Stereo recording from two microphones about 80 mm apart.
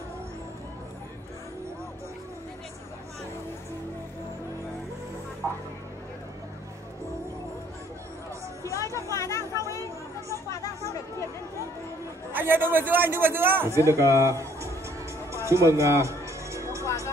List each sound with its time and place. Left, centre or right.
5.4 s music: right
8.6 s music: left
9.1 s chatter: left
12.3 s a man's voice: right
13.7 s a man's voice: right
15.3 s music: right
16.8 s music: left